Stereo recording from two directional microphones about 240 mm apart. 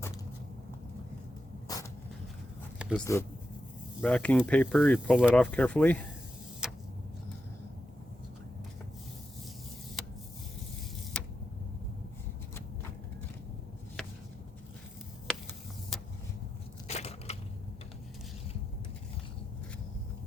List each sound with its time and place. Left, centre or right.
1.6 s vehicle: centre
3.1 s speech: centre
6.6 s vehicle: centre
11.1 s vehicle: centre
16.9 s crushing: left